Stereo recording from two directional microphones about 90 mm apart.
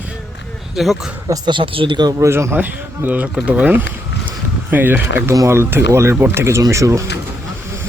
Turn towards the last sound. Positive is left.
turn(degrees=-35)  # may be behind; listen again after turning